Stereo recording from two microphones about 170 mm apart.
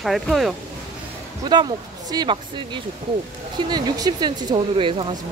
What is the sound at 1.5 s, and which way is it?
Speech, 25° right (ahead or behind).